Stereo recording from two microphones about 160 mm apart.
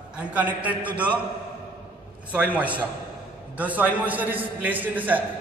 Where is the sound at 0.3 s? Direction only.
10° right (ahead or behind).